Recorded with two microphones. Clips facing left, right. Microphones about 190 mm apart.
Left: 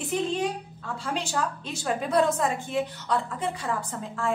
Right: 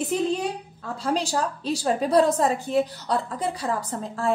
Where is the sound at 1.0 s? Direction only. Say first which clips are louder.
Right 5 dB; 35° right (ahead or behind).